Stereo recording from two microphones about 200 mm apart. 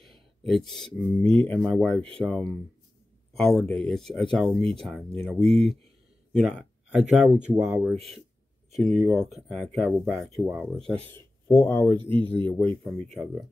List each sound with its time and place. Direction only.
0.5 s speech: centre (ahead or behind)
8.7 s speech: centre (ahead or behind)
11.5 s speech: 10° left (ahead or behind)
12.0 s speech: 25° right (ahead or behind)
12.4 s speech: 5° left (ahead or behind)